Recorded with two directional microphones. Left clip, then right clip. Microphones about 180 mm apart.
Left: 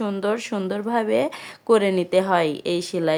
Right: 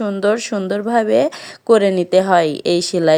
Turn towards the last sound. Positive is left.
turn(degrees=-30)  # may be behind; listen again after turning